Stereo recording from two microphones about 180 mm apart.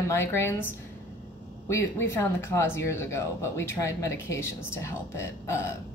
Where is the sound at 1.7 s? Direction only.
15° left (ahead or behind).